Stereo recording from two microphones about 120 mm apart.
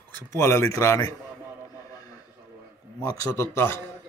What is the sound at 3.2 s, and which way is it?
Speech, 20° left (ahead or behind).